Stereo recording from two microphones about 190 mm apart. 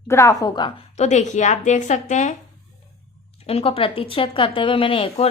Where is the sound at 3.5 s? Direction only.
30° left (ahead or behind).